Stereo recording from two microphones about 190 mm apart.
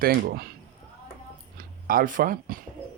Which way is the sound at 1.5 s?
45° right (ahead or behind).